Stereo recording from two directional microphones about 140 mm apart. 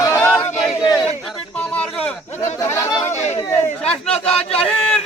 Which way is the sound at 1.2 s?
5° left (ahead or behind).